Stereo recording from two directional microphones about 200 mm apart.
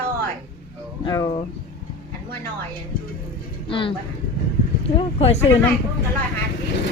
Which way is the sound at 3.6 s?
25° left (ahead or behind).